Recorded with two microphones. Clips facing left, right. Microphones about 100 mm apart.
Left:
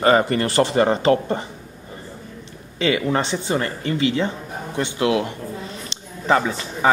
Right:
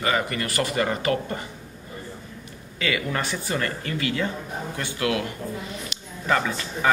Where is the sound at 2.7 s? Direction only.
25° left (ahead or behind).